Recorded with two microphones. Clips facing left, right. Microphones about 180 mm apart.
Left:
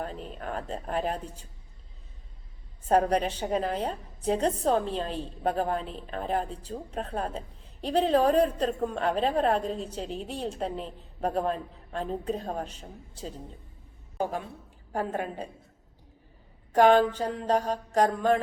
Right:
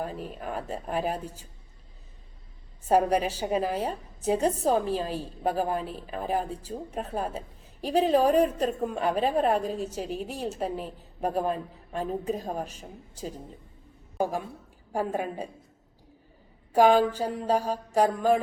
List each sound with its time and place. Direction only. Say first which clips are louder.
0.0 s a woman's voice: right 2 dB; 5° right (ahead or behind)
2.8 s a woman's voice: right 1 dB; 5° right (ahead or behind)
14.9 s a woman's voice: right 2 dB; 10° right (ahead or behind)
16.7 s a woman's voice: even; 10° right (ahead or behind)